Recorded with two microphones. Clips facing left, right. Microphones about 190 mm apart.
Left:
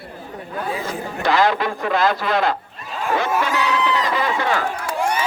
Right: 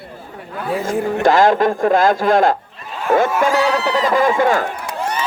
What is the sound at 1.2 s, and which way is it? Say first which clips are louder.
Speech: right 5 dB; 45° right (ahead or behind).